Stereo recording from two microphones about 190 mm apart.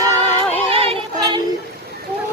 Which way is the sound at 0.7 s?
30° right (ahead or behind).